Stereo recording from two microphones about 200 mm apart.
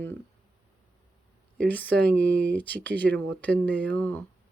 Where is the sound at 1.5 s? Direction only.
10° left (ahead or behind).